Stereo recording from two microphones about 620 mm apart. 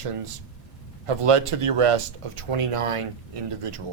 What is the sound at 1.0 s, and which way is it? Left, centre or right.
Speech, right.